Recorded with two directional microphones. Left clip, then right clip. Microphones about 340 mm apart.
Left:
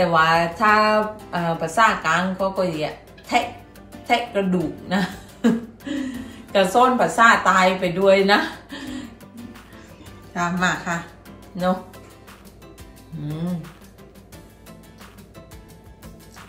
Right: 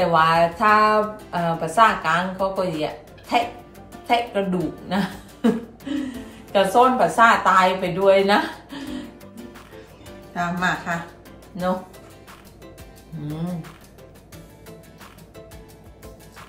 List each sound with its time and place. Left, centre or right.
0.0 s a woman's voice: centre
10.3 s speech: centre